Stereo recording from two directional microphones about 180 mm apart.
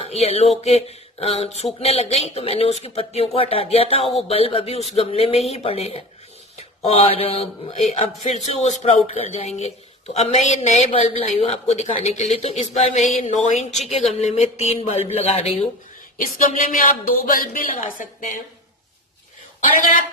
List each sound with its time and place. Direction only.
0.0 s a sound: 35° left (ahead or behind)
0.6 s speech: 35° left (ahead or behind)
16.2 s a woman's voice: 50° left (ahead or behind)